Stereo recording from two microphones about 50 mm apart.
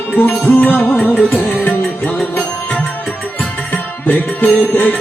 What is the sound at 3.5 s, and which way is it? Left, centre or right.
Music, left.